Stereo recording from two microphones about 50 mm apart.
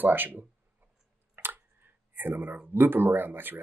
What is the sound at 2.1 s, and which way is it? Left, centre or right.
Speech, right.